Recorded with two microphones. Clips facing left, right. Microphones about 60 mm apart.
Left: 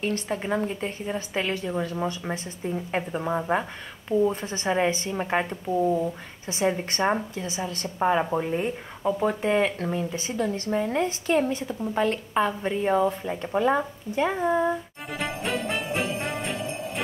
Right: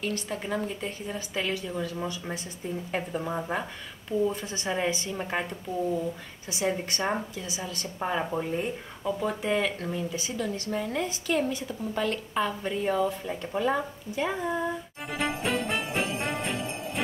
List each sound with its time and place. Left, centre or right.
0.0 s a woman's voice: left
15.0 s jingle bell: centre